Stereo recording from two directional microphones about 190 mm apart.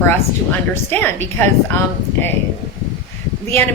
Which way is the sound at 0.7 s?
10° left (ahead or behind).